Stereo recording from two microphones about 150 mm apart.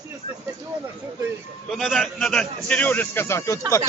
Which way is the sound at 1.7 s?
Centre (ahead or behind).